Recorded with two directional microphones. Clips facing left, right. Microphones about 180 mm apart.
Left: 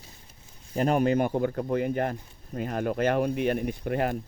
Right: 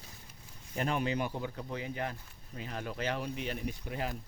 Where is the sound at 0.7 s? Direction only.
45° left (ahead or behind).